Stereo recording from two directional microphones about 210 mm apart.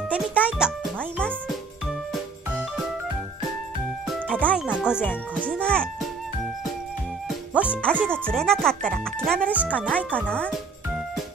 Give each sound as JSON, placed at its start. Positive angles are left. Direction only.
{"t": 0.1, "sound": "music", "side_deg": -5}
{"t": 4.3, "sound": "music", "side_deg": 5}
{"t": 4.6, "sound": "speech", "side_deg": -5}
{"t": 7.2, "sound": "music", "side_deg": -5}
{"t": 7.8, "sound": "speech", "side_deg": 5}